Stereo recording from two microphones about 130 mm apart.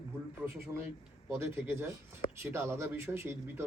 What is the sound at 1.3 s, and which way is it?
A man's voice, 15° right (ahead or behind).